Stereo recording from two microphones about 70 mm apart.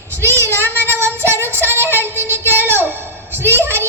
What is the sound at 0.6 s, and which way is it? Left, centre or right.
Child singing, right.